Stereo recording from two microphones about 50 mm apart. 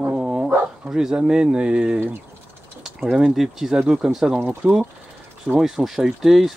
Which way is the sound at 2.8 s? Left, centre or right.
Centre.